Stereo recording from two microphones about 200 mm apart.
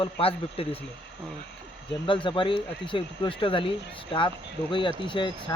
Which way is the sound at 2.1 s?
25° left (ahead or behind).